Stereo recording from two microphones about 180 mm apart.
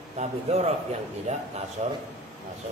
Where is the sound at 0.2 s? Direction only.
35° right (ahead or behind).